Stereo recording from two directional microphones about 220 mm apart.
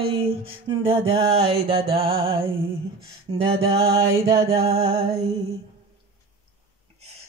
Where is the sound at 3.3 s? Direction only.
20° right (ahead or behind).